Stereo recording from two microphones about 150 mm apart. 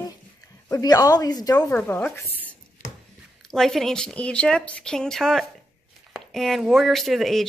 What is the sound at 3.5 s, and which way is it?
Speech, centre (ahead or behind).